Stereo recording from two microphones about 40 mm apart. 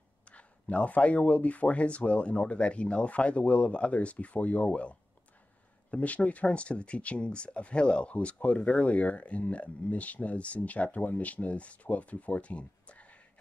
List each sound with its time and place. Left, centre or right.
0.2 s speech: left